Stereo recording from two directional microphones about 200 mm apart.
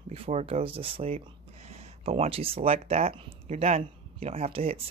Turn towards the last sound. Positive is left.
turn(degrees=-30)  # may be behind; listen again after turning